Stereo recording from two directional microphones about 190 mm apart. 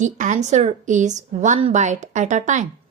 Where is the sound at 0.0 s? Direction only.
40° right (ahead or behind).